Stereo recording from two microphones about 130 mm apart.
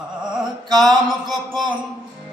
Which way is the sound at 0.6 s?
35° right (ahead or behind).